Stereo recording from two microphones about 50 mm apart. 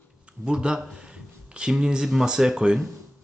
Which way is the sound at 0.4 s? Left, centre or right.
Centre.